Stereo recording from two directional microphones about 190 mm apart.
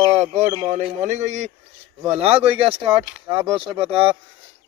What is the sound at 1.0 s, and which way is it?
Speech, 40° right (ahead or behind).